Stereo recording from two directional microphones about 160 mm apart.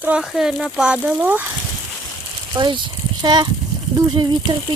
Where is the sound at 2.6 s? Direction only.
30° right (ahead or behind).